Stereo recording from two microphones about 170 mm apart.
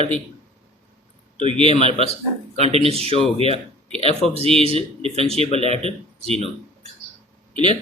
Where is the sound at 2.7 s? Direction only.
35° right (ahead or behind).